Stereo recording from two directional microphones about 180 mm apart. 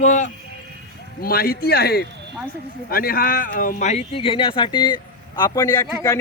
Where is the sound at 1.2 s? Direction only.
55° left (ahead or behind).